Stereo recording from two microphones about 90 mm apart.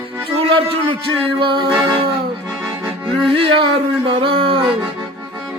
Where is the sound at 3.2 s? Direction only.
90° right.